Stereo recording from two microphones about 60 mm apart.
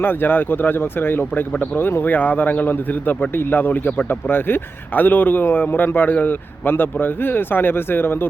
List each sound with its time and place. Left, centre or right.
0.0 s a man's voice: left